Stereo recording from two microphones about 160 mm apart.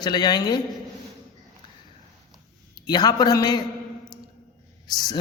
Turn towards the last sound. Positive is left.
turn(degrees=25)  # may be behind; listen again after turning